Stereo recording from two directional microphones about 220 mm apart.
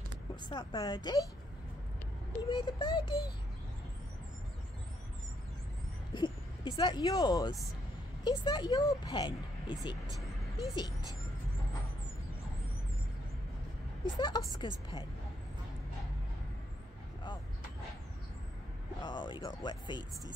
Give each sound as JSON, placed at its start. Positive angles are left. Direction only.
{"t": 0.4, "sound": "speech", "side_deg": 20}
{"t": 2.5, "sound": "speech", "side_deg": 20}
{"t": 6.1, "sound": "speech", "side_deg": 20}
{"t": 14.0, "sound": "speech", "side_deg": 20}
{"t": 18.9, "sound": "speech", "side_deg": 20}